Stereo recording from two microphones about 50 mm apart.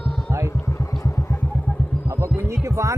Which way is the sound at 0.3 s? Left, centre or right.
Right.